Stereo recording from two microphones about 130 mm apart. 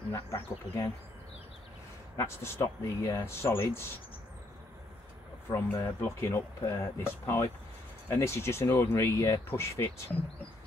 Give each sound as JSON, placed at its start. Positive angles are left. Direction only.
{"t": 0.1, "sound": "speech", "side_deg": 20}
{"t": 2.1, "sound": "speech", "side_deg": 20}
{"t": 5.5, "sound": "speech", "side_deg": 20}